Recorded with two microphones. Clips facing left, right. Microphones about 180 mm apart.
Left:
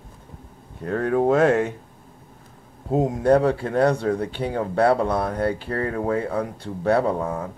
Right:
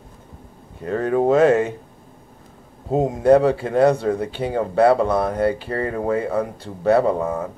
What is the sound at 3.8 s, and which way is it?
Speech, 10° right (ahead or behind).